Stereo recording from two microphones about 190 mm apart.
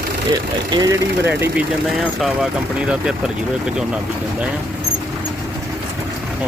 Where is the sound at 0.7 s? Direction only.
20° right (ahead or behind).